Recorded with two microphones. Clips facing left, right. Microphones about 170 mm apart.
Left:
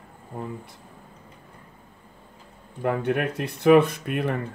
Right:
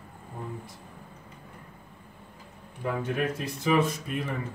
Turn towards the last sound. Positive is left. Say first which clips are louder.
# left 6 dB
turn(degrees=60)  # may be behind; listen again after turning